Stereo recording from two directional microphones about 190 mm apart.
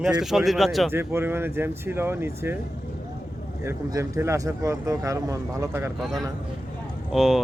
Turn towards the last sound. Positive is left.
turn(degrees=0)  # may be behind; listen again after turning